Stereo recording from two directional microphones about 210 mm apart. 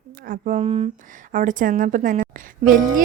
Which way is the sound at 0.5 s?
30° right (ahead or behind).